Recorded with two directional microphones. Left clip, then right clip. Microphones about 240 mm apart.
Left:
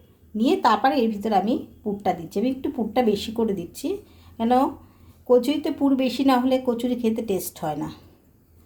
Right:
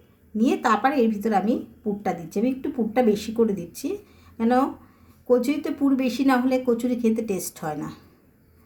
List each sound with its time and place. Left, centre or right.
0.3 s a woman's voice: left